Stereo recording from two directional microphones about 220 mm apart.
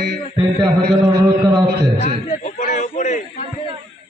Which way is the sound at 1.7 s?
45° right (ahead or behind).